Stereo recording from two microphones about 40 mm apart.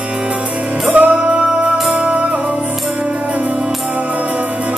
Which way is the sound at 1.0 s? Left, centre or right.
Right.